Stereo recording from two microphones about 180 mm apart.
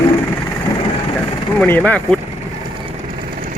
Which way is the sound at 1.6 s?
10° left (ahead or behind).